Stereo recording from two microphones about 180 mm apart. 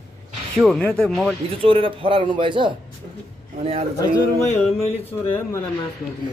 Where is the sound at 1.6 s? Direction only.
30° right (ahead or behind).